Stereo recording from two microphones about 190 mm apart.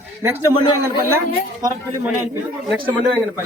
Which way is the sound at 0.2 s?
15° right (ahead or behind).